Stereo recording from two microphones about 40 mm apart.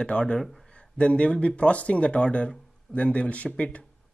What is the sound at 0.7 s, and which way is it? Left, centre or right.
Speech, left.